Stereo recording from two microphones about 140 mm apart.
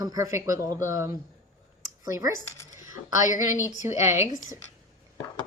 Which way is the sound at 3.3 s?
65° left (ahead or behind).